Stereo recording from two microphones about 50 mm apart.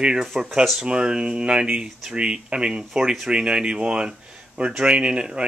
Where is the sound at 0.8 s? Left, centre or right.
Centre.